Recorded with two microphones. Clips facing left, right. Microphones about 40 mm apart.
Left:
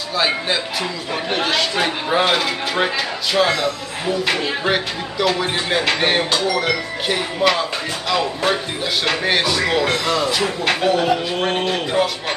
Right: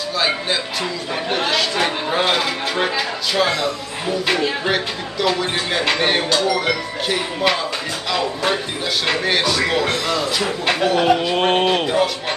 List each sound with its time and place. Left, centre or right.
0.1 s speech: centre
9.0 s speech: centre
11.0 s a sound: right
11.8 s speech: centre